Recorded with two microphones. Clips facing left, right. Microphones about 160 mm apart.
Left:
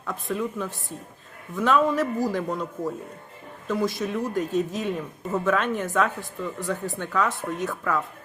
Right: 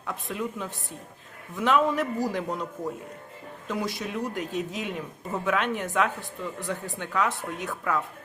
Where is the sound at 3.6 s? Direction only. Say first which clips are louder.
Left 5 dB; 20° right (ahead or behind).